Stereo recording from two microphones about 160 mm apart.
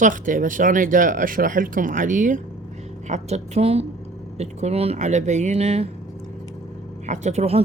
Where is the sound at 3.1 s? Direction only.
45° right (ahead or behind).